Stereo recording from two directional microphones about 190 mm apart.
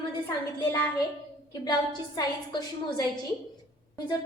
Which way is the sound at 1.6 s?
25° left (ahead or behind).